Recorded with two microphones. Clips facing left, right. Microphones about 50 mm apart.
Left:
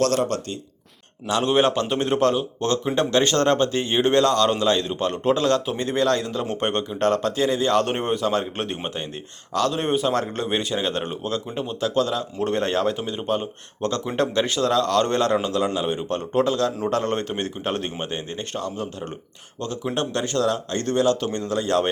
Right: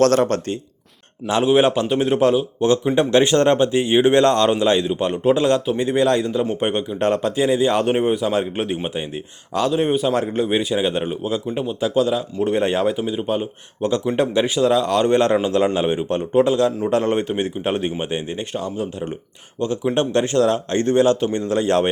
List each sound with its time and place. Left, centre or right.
0.0 s speech: right
1.5 s a man's voice: centre
6.2 s a man's voice: centre; by 21.8 s right